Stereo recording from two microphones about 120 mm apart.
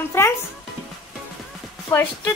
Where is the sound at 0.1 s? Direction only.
20° left (ahead or behind).